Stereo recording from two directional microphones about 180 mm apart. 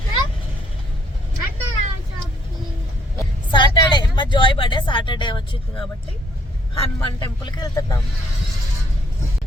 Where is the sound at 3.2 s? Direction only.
25° left (ahead or behind).